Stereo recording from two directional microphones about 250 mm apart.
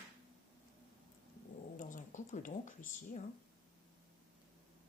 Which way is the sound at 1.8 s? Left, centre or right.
Left.